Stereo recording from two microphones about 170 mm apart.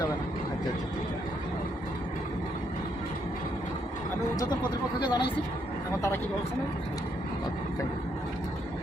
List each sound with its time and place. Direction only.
4.9 s speech: 25° left (ahead or behind)